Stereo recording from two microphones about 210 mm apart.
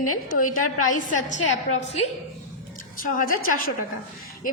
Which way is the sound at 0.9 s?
35° left (ahead or behind).